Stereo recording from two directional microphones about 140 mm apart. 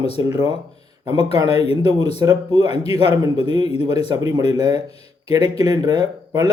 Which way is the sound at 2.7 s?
45° left (ahead or behind).